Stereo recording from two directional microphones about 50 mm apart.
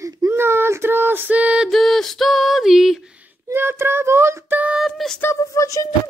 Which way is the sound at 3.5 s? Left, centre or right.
Right.